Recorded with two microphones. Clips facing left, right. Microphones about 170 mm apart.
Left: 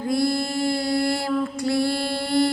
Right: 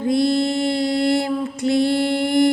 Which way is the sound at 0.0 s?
20° right (ahead or behind).